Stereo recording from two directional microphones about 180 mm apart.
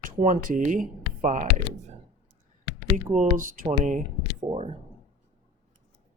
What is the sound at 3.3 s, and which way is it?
Speech, 50° right (ahead or behind).